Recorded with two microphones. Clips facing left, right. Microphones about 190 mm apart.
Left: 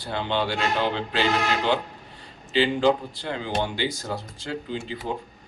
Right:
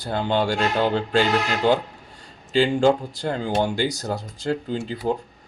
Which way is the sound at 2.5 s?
45° right (ahead or behind).